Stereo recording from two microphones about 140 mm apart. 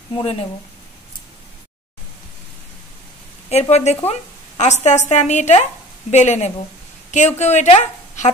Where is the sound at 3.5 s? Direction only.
50° left (ahead or behind).